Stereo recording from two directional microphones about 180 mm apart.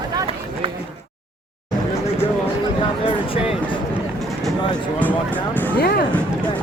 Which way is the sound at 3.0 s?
30° left (ahead or behind).